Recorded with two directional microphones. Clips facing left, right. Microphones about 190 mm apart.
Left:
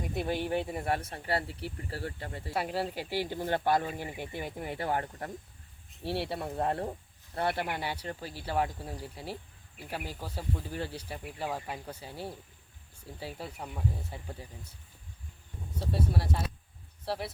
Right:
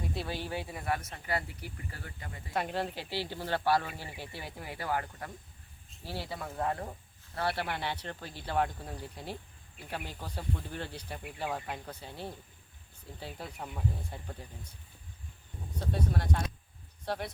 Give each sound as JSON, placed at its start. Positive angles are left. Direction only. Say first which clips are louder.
{"t": 0.0, "sound": "a sound", "louder": "left 4 dB", "side_deg": 20}
{"t": 0.6, "sound": "speech", "louder": "left 3 dB", "side_deg": 30}
{"t": 2.5, "sound": "speech", "louder": "left 1 dB", "side_deg": 5}
{"t": 6.1, "sound": "speech", "louder": "left 5 dB", "side_deg": 65}
{"t": 6.4, "sound": "speech", "louder": "left 3 dB", "side_deg": 30}
{"t": 7.3, "sound": "speech", "louder": "left 2 dB", "side_deg": 20}
{"t": 15.9, "sound": "speech", "louder": "left 1 dB", "side_deg": 5}